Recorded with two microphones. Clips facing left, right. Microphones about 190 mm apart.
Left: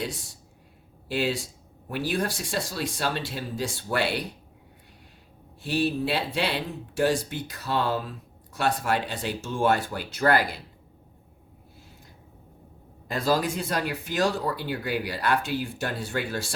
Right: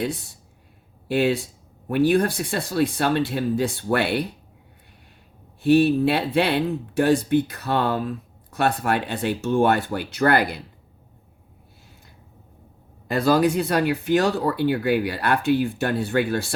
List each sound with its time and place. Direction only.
1.0 s speech: 60° right (ahead or behind)
5.6 s speech: 60° right (ahead or behind)
13.1 s speech: 65° right (ahead or behind)